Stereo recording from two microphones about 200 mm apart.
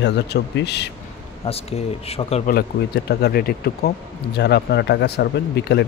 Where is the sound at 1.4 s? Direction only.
30° left (ahead or behind).